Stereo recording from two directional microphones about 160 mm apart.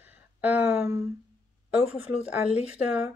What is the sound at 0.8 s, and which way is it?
Speech, 15° right (ahead or behind).